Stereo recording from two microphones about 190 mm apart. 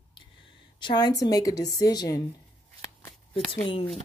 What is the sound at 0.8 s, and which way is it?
Speech, 20° left (ahead or behind).